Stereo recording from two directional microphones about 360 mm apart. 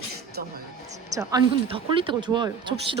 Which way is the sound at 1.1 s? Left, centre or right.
Centre.